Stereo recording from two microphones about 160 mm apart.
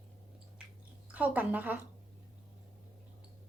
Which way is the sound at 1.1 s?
10° right (ahead or behind).